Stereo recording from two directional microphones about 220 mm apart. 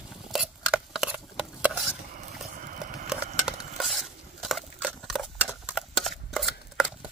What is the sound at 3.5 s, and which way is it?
Stir, centre (ahead or behind).